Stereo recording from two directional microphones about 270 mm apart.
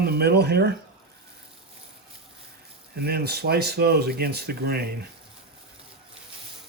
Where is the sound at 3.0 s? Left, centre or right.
Right.